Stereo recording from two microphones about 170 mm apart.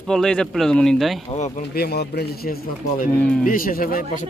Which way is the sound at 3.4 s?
55° left (ahead or behind).